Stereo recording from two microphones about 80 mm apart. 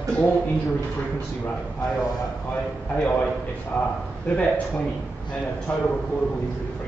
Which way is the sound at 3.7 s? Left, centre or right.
Centre.